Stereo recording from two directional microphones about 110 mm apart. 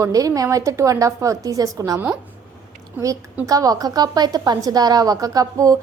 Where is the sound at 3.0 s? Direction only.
30° right (ahead or behind).